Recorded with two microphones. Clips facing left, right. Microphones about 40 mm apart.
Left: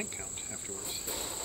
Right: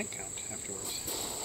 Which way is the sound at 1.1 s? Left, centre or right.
Left.